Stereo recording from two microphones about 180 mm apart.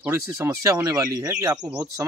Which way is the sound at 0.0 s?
15° right (ahead or behind).